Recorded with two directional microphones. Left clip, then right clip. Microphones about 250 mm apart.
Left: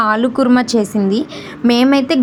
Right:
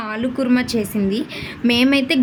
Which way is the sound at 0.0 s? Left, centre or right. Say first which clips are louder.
Left 9 dB; left.